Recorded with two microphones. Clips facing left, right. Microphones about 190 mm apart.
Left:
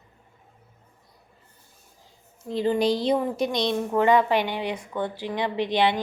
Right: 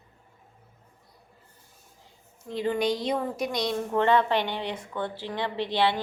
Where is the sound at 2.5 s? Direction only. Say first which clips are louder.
Left 4 dB; 35° left (ahead or behind).